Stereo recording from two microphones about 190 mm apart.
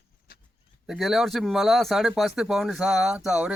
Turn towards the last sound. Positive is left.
turn(degrees=-5)  # may be behind; listen again after turning